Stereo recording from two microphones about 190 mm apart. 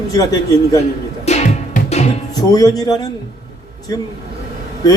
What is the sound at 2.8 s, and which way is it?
Speech, 20° left (ahead or behind).